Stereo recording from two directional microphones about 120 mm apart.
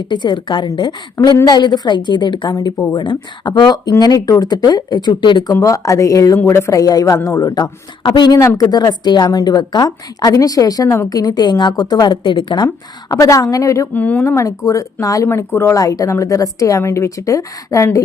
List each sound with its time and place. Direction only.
0.1 s a woman's voice: 40° left (ahead or behind)
5.6 s a woman's voice: 25° left (ahead or behind)
8.4 s a woman's voice: 25° left (ahead or behind)
13.9 s speech: 15° left (ahead or behind)
14.3 s a woman's voice: 25° left (ahead or behind)